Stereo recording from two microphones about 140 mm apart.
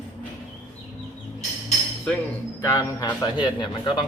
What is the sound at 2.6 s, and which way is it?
Speech, 25° left (ahead or behind).